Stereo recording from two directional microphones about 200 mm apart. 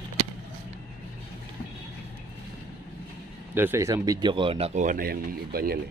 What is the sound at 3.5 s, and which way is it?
Speech, 10° right (ahead or behind).